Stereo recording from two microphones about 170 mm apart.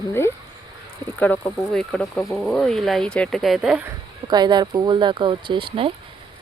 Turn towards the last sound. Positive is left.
turn(degrees=-30)  # may be behind; listen again after turning